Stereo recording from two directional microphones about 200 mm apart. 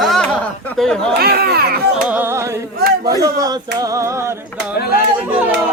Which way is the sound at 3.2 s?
20° right (ahead or behind).